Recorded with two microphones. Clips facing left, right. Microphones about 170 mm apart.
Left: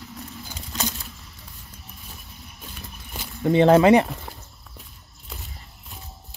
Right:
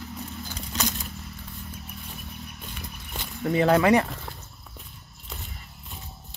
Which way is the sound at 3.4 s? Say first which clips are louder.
Left 5 dB; 25° left (ahead or behind).